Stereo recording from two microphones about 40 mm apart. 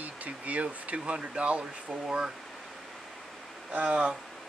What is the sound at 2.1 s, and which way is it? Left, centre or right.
Speech, centre.